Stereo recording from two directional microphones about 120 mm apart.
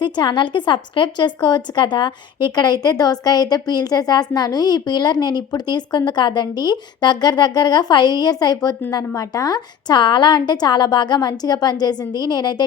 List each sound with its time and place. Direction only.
0.0 s a woman's voice: 40° left (ahead or behind)